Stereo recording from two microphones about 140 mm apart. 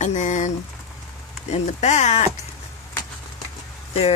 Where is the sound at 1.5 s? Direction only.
55° left (ahead or behind).